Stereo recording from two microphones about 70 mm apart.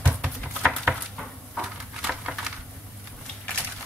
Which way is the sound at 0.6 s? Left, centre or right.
Centre.